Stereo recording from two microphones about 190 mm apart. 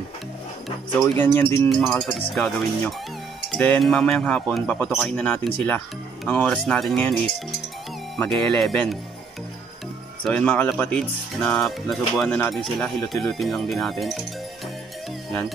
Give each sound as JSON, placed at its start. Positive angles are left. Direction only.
{"t": 1.1, "sound": "speech", "side_deg": 10}
{"t": 8.2, "sound": "speech", "side_deg": 5}
{"t": 10.2, "sound": "speech", "side_deg": 5}